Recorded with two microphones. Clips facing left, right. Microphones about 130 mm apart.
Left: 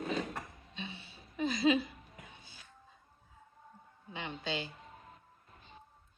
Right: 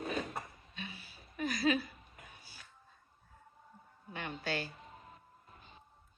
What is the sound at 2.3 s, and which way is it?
Music, 20° left (ahead or behind).